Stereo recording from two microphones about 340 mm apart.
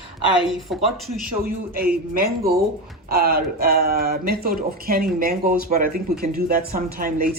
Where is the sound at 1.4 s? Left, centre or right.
Right.